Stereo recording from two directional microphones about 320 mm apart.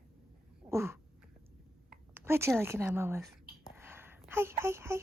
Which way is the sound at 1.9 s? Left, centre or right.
Centre.